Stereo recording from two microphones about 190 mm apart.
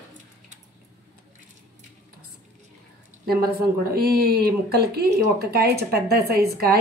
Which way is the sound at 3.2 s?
55° right (ahead or behind).